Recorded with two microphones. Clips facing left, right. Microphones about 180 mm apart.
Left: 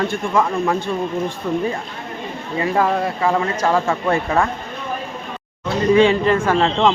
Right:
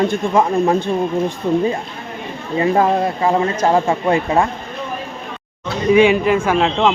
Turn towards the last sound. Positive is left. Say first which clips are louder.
# right 1 dB
turn(degrees=-5)  # may be behind; listen again after turning